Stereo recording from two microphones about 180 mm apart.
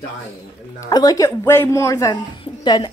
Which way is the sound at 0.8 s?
20° left (ahead or behind).